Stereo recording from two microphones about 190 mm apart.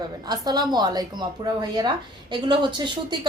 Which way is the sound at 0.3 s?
20° right (ahead or behind).